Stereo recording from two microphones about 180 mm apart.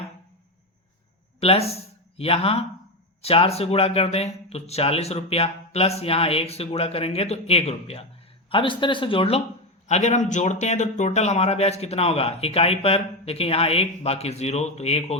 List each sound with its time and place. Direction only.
1.4 s speech: 35° left (ahead or behind)